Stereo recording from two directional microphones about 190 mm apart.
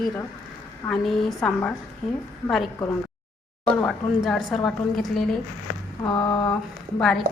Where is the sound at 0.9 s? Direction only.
5° left (ahead or behind).